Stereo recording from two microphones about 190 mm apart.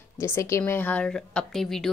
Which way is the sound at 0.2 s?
15° left (ahead or behind).